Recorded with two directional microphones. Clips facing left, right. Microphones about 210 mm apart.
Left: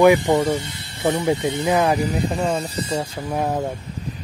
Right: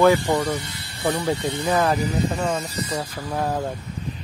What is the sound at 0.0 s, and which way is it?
Speech, 20° left (ahead or behind).